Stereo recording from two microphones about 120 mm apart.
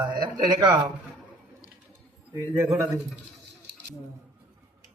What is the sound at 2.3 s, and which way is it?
Speech, 20° right (ahead or behind).